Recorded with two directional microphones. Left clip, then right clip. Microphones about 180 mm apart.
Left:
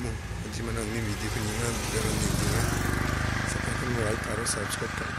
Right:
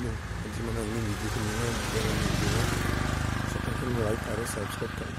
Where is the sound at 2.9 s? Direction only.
45° left (ahead or behind).